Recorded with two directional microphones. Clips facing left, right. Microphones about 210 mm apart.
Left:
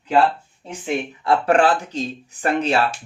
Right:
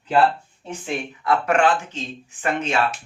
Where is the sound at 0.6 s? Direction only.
20° left (ahead or behind).